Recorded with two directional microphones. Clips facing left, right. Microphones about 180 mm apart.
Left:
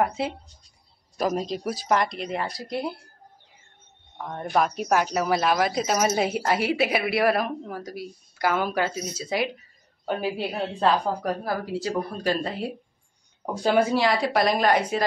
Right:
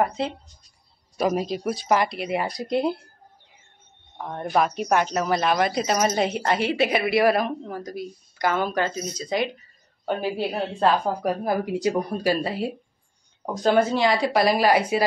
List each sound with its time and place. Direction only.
0.2 s speech: 5° left (ahead or behind)
2.4 s speech: 20° right (ahead or behind)
4.3 s speech: 5° right (ahead or behind)
11.4 s speech: 20° right (ahead or behind)
13.6 s speech: 10° left (ahead or behind); by 15.0 s 10° right (ahead or behind)